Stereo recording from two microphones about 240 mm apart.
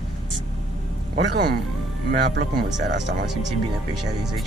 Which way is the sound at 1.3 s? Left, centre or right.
Right.